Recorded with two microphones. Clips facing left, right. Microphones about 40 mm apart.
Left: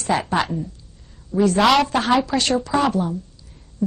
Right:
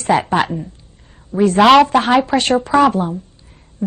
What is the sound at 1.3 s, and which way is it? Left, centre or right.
A man's voice, right.